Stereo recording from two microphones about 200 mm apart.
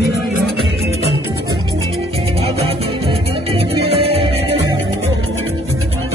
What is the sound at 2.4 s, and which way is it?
Music, 30° right (ahead or behind).